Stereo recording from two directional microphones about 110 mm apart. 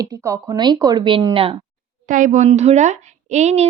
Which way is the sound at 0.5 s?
40° right (ahead or behind).